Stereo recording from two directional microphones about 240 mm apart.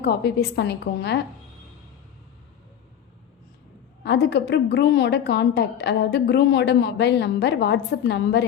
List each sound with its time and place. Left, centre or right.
0.0 s speech: left
4.0 s speech: left